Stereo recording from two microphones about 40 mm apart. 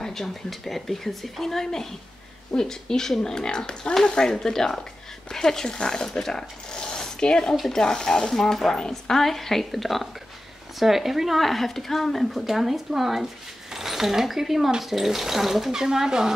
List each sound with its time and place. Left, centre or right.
0.0 s speech: centre
4.3 s speech: centre
8.3 s a woman's voice: centre
8.7 s speech: centre
9.2 s a woman's voice: centre